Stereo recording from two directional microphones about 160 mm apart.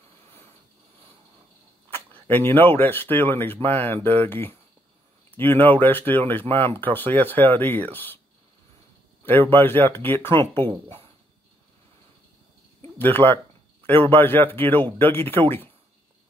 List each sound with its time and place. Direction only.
1.9 s speech: 10° left (ahead or behind)
9.2 s speech: 10° left (ahead or behind)
12.9 s speech: 10° left (ahead or behind)